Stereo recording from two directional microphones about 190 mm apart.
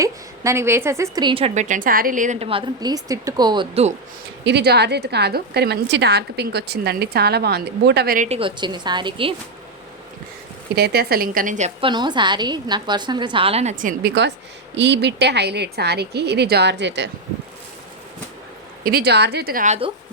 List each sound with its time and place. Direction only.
0.0 s a woman's voice: 15° right (ahead or behind)
4.4 s a woman's voice: 60° right (ahead or behind)
8.3 s a woman's voice: 25° right (ahead or behind)
10.8 s speech: 55° right (ahead or behind); by 11.9 s 40° right (ahead or behind)
11.9 s a woman's voice: 25° right (ahead or behind); by 14.1 s 45° right (ahead or behind)
14.8 s a woman's voice: 65° right (ahead or behind)
18.8 s speech: 55° right (ahead or behind); by 19.9 s 35° right (ahead or behind)